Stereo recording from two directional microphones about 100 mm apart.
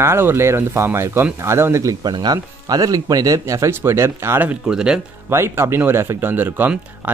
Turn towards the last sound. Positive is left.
turn(degrees=-20)  # may be behind; listen again after turning